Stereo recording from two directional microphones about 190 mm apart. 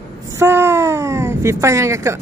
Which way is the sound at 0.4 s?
15° right (ahead or behind).